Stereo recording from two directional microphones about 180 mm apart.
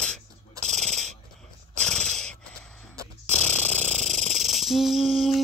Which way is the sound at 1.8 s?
5° left (ahead or behind).